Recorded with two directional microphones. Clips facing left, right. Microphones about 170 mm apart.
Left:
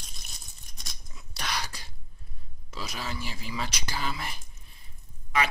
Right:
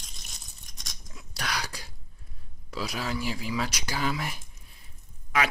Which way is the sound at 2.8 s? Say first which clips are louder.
Right 5 dB; 10° right (ahead or behind).